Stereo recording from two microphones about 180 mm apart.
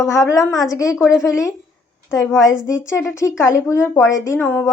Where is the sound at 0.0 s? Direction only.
15° left (ahead or behind).